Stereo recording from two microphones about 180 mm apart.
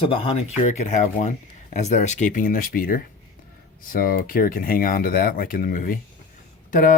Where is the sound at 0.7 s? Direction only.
40° left (ahead or behind).